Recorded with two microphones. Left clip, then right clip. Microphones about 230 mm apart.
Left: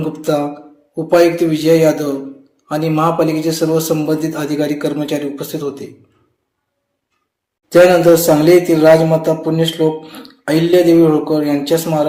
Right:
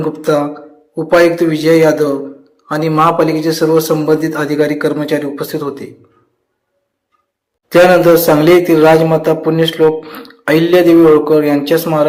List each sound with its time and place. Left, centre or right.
0.0 s a man's voice: centre
7.7 s a man's voice: centre